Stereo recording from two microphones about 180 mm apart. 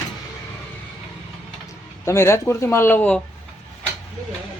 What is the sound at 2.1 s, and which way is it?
Speech, 15° left (ahead or behind).